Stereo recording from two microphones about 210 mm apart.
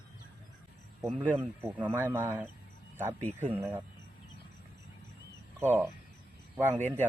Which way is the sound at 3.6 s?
15° right (ahead or behind).